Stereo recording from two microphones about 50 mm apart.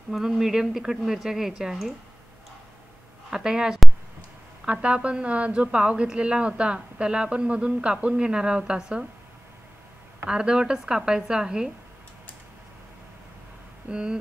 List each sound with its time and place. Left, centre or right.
0.1 s a woman's voice: centre
3.3 s a woman's voice: centre
10.2 s a woman's voice: centre
13.8 s a woman's voice: centre